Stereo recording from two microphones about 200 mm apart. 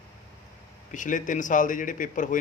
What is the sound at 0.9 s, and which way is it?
A man's voice, 40° left (ahead or behind).